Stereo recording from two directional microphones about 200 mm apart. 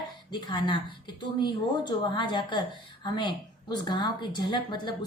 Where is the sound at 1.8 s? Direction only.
25° left (ahead or behind).